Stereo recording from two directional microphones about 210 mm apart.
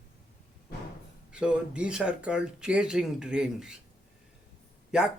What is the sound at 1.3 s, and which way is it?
Speech, 5° right (ahead or behind).